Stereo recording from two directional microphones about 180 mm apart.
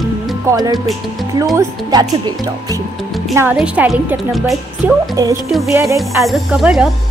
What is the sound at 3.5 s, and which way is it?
Speech, 5° right (ahead or behind).